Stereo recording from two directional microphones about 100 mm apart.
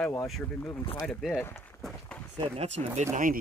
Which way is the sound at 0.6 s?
30° left (ahead or behind).